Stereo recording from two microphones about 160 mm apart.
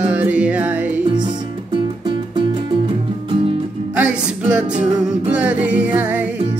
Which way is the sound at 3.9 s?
10° right (ahead or behind).